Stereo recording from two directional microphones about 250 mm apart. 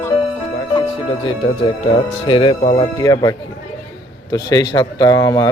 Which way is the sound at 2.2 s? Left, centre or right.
Centre.